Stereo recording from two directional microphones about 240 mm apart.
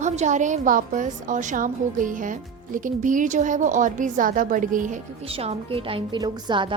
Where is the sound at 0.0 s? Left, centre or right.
Right.